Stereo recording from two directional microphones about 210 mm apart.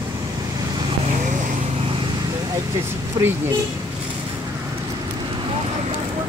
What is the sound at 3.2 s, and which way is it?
Speech, 20° right (ahead or behind).